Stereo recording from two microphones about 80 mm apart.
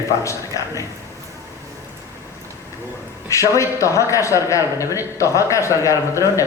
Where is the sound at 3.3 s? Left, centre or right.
Left.